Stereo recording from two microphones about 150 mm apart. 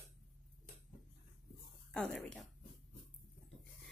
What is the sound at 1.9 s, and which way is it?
Speech, 5° left (ahead or behind).